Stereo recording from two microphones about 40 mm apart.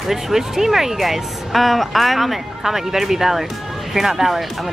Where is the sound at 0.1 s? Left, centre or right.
Centre.